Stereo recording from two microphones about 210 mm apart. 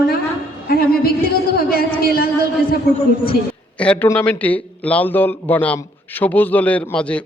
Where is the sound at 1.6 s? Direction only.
45° left (ahead or behind).